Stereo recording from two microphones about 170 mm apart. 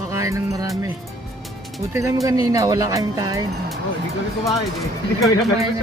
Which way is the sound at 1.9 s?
15° right (ahead or behind).